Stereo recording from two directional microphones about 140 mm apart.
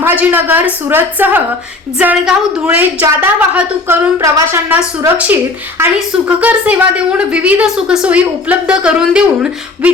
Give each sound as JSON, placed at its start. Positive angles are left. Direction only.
{"t": 0.0, "sound": "a woman's voice", "side_deg": -15}